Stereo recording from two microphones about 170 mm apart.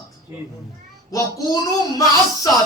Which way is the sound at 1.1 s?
20° left (ahead or behind).